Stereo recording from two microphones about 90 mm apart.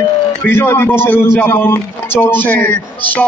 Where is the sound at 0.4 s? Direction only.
25° left (ahead or behind).